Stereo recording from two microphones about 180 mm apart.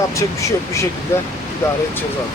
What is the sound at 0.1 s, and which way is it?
Speech, 15° left (ahead or behind).